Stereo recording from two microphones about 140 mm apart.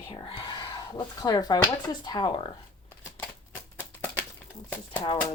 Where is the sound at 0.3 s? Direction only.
35° left (ahead or behind).